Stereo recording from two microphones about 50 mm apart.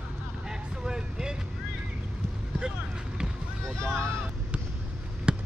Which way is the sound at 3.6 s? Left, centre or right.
Centre.